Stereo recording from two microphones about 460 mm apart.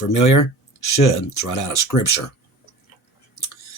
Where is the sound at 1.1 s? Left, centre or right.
Left.